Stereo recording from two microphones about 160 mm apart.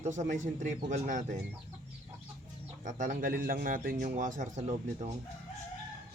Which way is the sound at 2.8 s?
55° right (ahead or behind).